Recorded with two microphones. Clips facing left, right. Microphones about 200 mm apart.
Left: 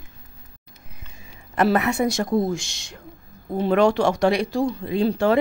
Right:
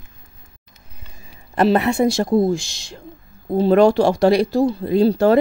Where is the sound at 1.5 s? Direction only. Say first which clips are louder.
Right 4 dB; 30° right (ahead or behind).